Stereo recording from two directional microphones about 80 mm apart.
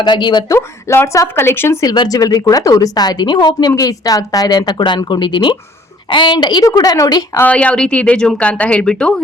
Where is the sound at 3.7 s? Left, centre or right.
Left.